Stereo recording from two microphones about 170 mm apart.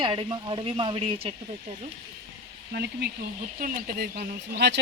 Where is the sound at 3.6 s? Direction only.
60° right (ahead or behind).